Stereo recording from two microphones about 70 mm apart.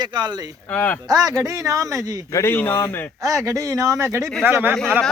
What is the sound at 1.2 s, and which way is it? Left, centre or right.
Speech, right.